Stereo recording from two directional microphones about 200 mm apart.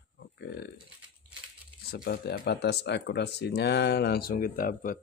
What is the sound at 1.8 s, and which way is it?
Speech, 50° left (ahead or behind).